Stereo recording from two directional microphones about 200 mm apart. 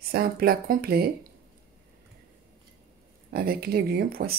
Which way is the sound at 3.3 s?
50° right (ahead or behind).